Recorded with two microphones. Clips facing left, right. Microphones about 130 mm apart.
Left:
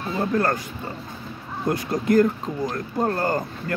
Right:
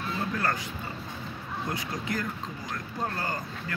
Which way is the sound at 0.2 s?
45° left (ahead or behind).